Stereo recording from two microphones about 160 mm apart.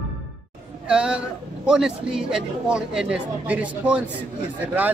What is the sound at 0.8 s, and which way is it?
Speech, 5° right (ahead or behind).